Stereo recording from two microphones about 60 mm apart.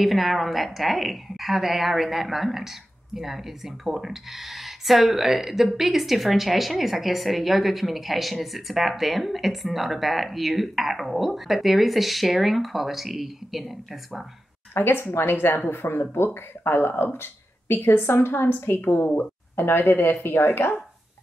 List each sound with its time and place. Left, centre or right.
0.0 s speech: centre
14.7 s a woman's voice: left